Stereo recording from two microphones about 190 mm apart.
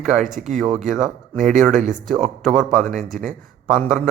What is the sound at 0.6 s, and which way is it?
Speech, 35° right (ahead or behind).